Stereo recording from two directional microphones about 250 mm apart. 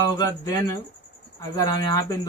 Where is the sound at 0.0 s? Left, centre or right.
Centre.